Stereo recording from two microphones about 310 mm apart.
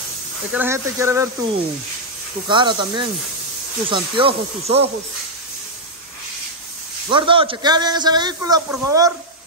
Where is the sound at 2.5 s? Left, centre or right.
Centre.